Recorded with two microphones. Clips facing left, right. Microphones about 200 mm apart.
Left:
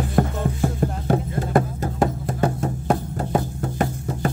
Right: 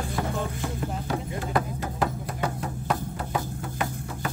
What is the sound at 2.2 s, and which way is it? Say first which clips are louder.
Music: left 7 dB; 45° left (ahead or behind).